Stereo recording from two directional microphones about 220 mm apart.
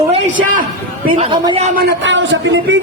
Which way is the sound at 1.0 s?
35° right (ahead or behind).